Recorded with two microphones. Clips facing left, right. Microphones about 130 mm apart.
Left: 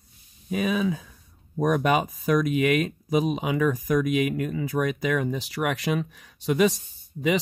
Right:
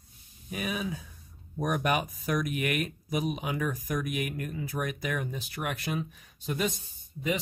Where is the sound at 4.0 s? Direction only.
90° left.